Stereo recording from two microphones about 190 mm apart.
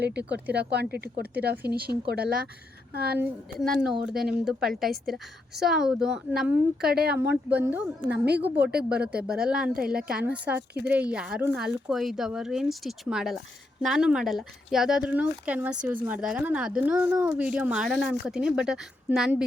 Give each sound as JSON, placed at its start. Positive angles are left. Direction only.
{"t": 0.0, "sound": "speech", "side_deg": -60}
{"t": 3.6, "sound": "speech", "side_deg": -5}
{"t": 6.8, "sound": "speech", "side_deg": -55}
{"t": 7.5, "sound": "a woman's voice", "side_deg": -10}
{"t": 8.1, "sound": "speech", "side_deg": -60}
{"t": 8.9, "sound": "a woman's voice", "side_deg": -5}